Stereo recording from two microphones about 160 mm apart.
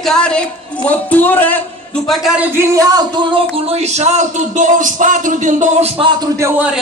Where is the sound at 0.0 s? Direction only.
5° left (ahead or behind).